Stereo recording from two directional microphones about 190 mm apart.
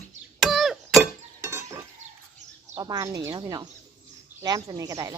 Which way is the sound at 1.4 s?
15° right (ahead or behind).